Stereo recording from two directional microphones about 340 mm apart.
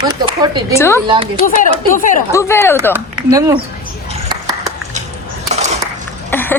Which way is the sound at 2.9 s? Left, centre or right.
Centre.